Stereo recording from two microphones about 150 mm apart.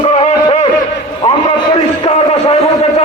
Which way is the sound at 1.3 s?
35° left (ahead or behind).